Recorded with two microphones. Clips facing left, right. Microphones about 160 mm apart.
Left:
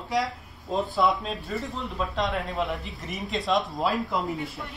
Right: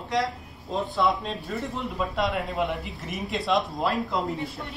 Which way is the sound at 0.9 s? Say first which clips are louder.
Right 1 dB; centre (ahead or behind).